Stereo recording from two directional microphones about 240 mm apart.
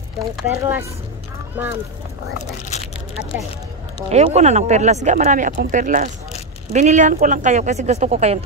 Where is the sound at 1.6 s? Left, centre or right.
Centre.